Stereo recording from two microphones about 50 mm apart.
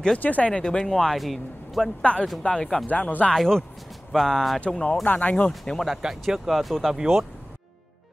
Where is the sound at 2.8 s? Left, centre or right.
Left.